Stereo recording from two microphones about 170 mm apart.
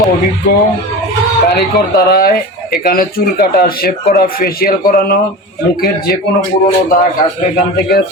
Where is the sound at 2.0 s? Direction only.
65° left (ahead or behind).